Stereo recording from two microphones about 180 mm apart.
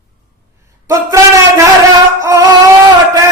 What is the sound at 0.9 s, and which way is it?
Speech, 15° right (ahead or behind).